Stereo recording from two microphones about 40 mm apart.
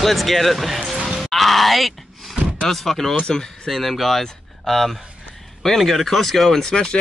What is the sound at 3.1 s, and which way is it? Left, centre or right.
Speech, left.